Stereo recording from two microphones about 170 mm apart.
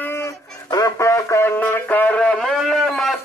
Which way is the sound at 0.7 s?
20° left (ahead or behind).